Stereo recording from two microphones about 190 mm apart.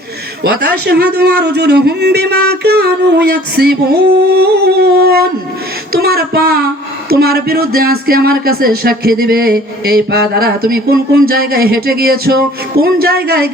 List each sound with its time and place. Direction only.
0.4 s a man's voice: 60° right (ahead or behind)